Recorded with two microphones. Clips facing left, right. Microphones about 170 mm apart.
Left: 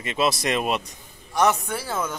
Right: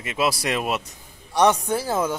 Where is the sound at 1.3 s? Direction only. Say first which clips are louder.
Right 3 dB; 30° right (ahead or behind).